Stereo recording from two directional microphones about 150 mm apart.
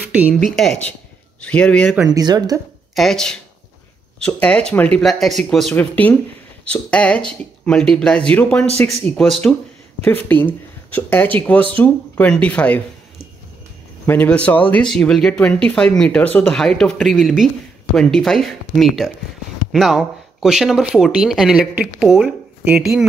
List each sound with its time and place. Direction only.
0.5 s speech: centre (ahead or behind)
2.0 s speech: 25° right (ahead or behind)
2.9 s speech: centre (ahead or behind)
14.0 s speech: 10° left (ahead or behind); by 23.0 s 15° right (ahead or behind)